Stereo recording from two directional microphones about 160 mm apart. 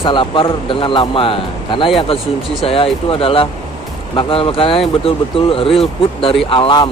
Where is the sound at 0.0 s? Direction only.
30° left (ahead or behind).